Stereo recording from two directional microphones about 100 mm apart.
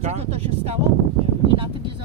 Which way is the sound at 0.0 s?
90° right.